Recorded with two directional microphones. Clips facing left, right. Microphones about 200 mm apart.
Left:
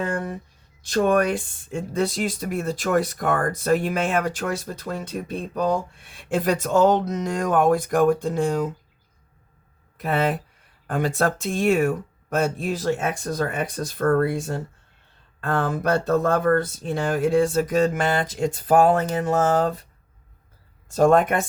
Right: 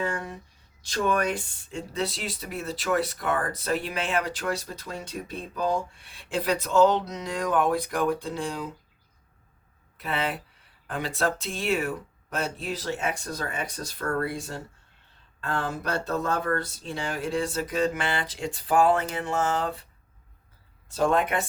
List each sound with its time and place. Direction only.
0.0 s speech: 55° left (ahead or behind)
10.0 s speech: 45° left (ahead or behind)
20.8 s speech: 45° left (ahead or behind)